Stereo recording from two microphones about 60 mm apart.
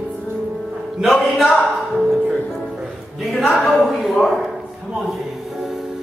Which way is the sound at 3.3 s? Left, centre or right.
Centre.